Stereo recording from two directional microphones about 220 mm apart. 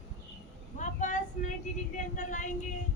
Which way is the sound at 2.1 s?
35° left (ahead or behind).